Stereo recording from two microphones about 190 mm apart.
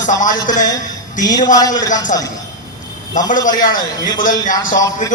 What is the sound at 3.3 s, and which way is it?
Speech, 45° left (ahead or behind).